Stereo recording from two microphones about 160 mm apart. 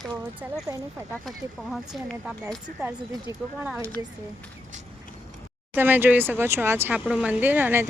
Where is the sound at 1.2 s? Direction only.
Centre (ahead or behind).